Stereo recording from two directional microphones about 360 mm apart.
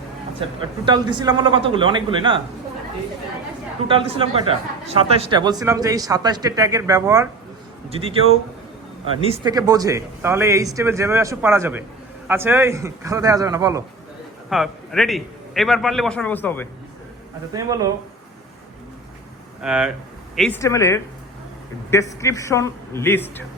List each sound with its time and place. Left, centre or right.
0.4 s speech: centre
3.8 s a man's voice: centre
17.5 s speech: centre
19.6 s a man's voice: centre